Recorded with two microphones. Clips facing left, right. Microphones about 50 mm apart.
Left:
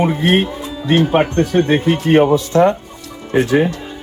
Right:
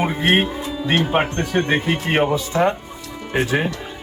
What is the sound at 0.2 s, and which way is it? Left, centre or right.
Speech, right.